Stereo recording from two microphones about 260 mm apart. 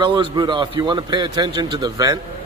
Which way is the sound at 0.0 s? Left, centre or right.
Centre.